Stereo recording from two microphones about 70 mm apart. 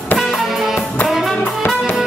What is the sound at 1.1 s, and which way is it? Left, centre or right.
Brass instrument, centre.